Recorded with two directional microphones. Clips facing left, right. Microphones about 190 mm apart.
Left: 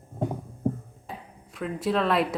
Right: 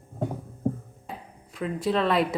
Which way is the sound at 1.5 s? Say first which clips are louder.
Right 1 dB; centre (ahead or behind).